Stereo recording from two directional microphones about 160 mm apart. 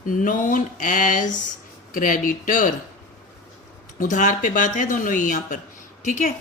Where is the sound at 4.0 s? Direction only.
50° left (ahead or behind).